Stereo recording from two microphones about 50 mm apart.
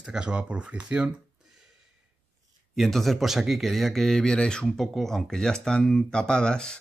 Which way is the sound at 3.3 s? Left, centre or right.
Centre.